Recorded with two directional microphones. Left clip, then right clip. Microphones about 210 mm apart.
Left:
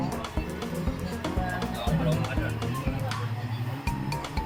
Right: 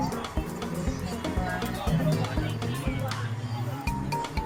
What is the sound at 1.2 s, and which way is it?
Music, centre (ahead or behind).